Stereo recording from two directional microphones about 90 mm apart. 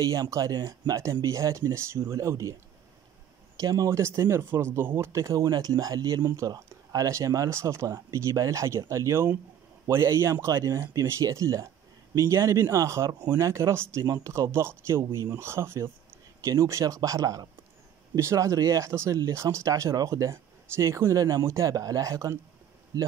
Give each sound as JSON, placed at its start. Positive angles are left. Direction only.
{"t": 0.0, "sound": "speech", "side_deg": -40}
{"t": 3.5, "sound": "speech", "side_deg": -40}